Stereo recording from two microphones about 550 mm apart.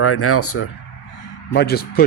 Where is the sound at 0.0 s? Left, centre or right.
Left.